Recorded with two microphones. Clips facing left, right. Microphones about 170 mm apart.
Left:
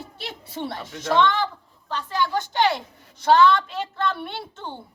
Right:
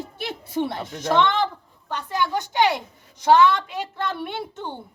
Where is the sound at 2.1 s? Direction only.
15° right (ahead or behind).